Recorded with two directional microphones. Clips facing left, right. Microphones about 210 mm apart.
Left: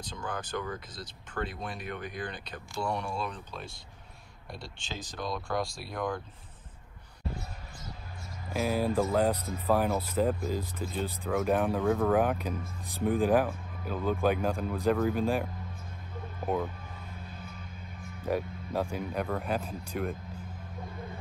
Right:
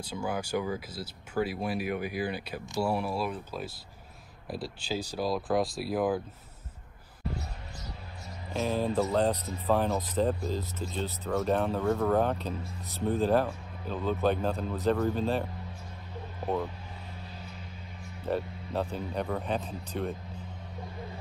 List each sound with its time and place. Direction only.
0.0 s speech: 10° right (ahead or behind)
8.5 s speech: 10° left (ahead or behind)
11.8 s speech: centre (ahead or behind)
12.2 s speech: 10° left (ahead or behind)
13.5 s speech: centre (ahead or behind)
14.0 s speech: 10° left (ahead or behind)
17.3 s vehicle: 55° left (ahead or behind)
18.2 s speech: 10° left (ahead or behind)